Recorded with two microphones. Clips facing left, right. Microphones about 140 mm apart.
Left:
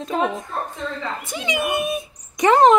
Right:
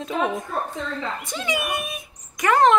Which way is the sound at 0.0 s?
Centre (ahead or behind).